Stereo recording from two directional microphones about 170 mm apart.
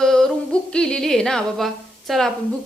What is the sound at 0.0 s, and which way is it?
Yodeling, 5° left (ahead or behind).